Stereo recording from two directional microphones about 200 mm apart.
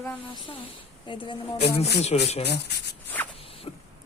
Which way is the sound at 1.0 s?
25° left (ahead or behind).